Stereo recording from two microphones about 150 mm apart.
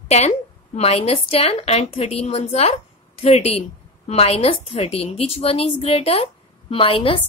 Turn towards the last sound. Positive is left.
turn(degrees=40)  # may be behind; listen again after turning